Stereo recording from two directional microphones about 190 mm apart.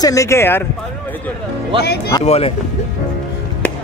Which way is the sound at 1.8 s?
55° left (ahead or behind).